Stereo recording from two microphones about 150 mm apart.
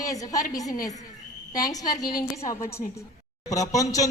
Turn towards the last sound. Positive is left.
turn(degrees=20)  # may be behind; listen again after turning